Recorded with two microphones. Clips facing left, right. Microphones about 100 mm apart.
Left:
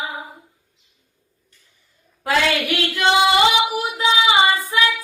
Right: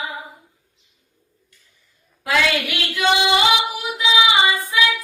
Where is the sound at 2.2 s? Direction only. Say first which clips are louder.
Left 1 dB; 40° left (ahead or behind).